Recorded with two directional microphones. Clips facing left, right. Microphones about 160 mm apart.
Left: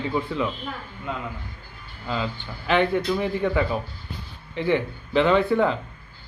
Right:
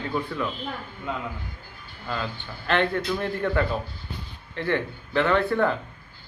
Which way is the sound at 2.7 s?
10° left (ahead or behind).